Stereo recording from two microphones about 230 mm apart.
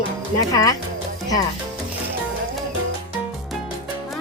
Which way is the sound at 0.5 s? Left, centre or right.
Centre.